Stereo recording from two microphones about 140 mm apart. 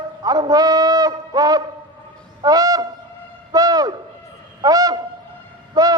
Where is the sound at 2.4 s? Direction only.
25° right (ahead or behind).